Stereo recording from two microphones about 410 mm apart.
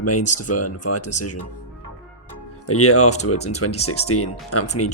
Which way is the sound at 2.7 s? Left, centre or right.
Left.